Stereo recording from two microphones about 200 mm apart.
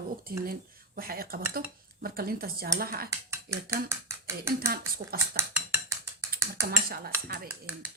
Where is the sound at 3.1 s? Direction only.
15° right (ahead or behind).